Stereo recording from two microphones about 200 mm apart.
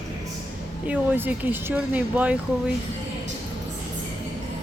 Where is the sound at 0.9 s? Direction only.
10° right (ahead or behind).